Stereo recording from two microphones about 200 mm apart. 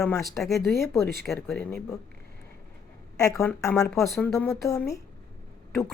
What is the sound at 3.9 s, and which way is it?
Speech, centre (ahead or behind).